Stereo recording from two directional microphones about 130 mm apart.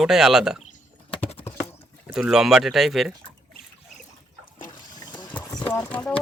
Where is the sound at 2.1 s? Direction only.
5° right (ahead or behind).